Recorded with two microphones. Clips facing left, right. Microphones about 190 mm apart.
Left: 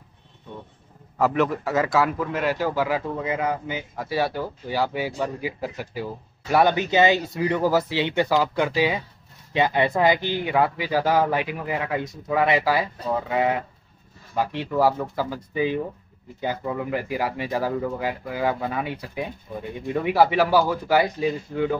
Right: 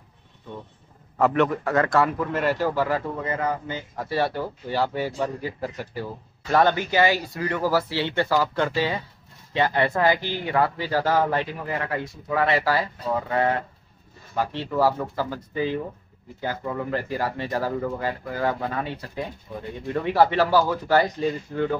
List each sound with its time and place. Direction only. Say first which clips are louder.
1.1 s a man's voice: right 1 dB; centre (ahead or behind)